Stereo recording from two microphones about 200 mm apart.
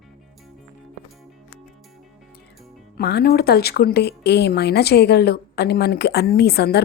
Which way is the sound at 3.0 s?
55° left (ahead or behind).